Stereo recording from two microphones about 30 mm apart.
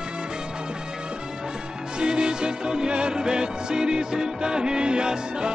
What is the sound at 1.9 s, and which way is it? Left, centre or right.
Music, right.